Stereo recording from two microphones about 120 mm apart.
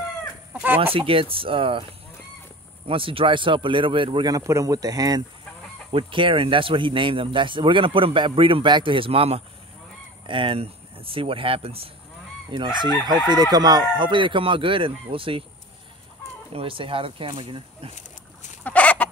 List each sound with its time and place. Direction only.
0.5 s chicken: 10° right (ahead or behind)
0.9 s speech: 50° right (ahead or behind)
2.9 s speech: 50° right (ahead or behind)
4.3 s speech: 25° right (ahead or behind)
5.9 s speech: 45° right (ahead or behind)
12.4 s chicken: 40° right (ahead or behind)
16.5 s speech: 50° right (ahead or behind)
18.6 s chicken: 10° left (ahead or behind)